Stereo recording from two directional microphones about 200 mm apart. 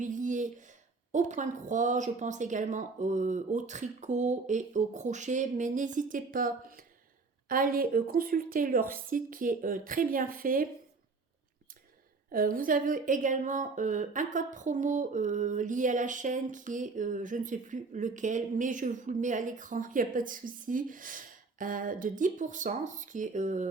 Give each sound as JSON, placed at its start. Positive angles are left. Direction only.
{"t": 0.0, "sound": "a sound", "side_deg": -40}
{"t": 1.1, "sound": "a woman's voice", "side_deg": -40}
{"t": 12.3, "sound": "speech", "side_deg": -45}